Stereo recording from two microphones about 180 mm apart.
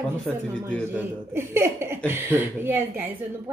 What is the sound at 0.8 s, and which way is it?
Speech, 10° right (ahead or behind).